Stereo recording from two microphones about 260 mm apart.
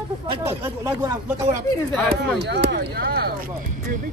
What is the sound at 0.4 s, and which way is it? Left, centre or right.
Speech, centre.